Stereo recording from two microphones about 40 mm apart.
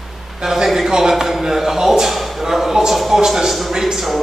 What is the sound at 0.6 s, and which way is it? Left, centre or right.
A man's voice, centre.